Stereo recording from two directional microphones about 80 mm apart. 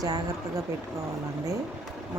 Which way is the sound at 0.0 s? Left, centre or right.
Right.